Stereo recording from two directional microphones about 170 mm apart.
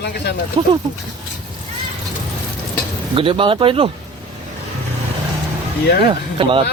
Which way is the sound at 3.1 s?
30° right (ahead or behind).